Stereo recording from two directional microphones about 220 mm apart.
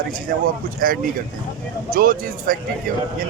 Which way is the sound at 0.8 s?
40° right (ahead or behind).